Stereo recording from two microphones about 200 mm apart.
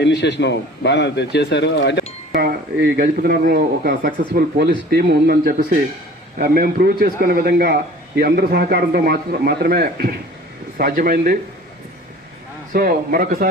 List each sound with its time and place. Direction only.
0.0 s a man's voice: 60° left (ahead or behind)
3.0 s a man's voice: 45° right (ahead or behind)
12.7 s a man's voice: 45° right (ahead or behind)